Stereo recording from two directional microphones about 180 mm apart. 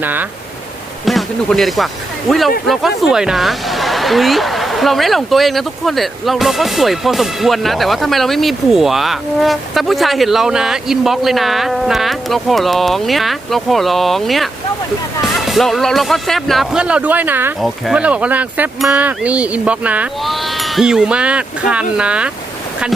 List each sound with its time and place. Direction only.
0.0 s speech: 10° right (ahead or behind)
1.0 s speech: centre (ahead or behind)